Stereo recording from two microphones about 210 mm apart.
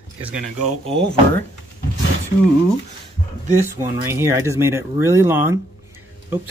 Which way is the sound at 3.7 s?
15° right (ahead or behind).